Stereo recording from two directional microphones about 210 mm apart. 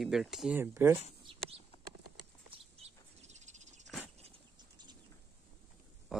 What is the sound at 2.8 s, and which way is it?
Bird, 35° right (ahead or behind).